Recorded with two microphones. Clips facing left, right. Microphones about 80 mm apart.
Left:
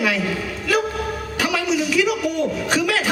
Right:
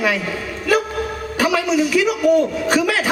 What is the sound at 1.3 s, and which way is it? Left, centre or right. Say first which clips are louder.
A woman's voice: right 4 dB; right.